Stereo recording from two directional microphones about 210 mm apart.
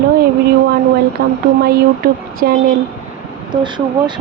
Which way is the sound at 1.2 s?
50° right (ahead or behind).